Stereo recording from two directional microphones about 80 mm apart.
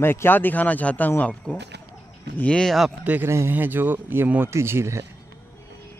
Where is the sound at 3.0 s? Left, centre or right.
Right.